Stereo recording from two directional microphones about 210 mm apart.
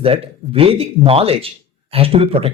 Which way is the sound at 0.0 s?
25° right (ahead or behind).